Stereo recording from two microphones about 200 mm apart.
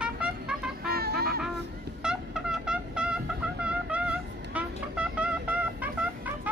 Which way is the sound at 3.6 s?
5° right (ahead or behind).